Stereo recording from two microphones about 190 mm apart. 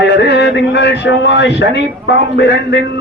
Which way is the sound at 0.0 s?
65° left (ahead or behind).